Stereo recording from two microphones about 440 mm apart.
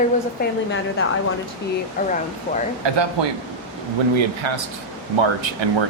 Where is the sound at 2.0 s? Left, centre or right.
Centre.